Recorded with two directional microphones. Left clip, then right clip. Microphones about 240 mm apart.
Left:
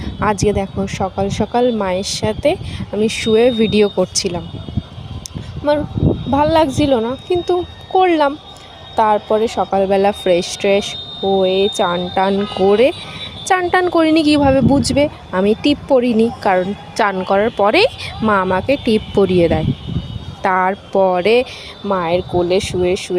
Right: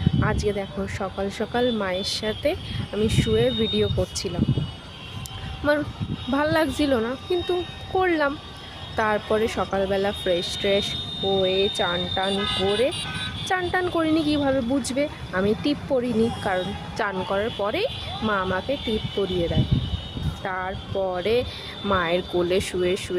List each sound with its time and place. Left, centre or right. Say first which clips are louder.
0.2 s speech: left 11 dB; left
6.3 s speech: left 8 dB; left
9.0 s speech: left 9 dB; centre; by 12.3 s left
13.4 s speech: left 10 dB; left
21.8 s speech: left 6 dB; centre